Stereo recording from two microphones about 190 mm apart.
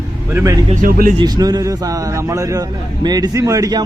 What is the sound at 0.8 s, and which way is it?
Speech, 50° right (ahead or behind).